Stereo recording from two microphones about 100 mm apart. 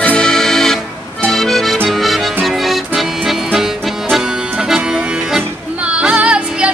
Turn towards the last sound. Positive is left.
turn(degrees=-10)  # may be behind; listen again after turning